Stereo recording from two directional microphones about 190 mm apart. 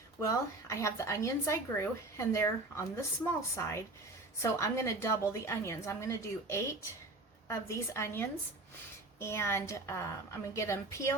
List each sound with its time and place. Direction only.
0.2 s a woman's voice: 15° left (ahead or behind)